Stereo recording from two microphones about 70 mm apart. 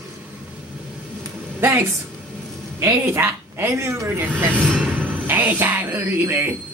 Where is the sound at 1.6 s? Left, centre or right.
Right.